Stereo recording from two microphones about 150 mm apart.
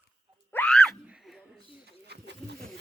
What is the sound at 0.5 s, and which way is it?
Screaming, 5° left (ahead or behind).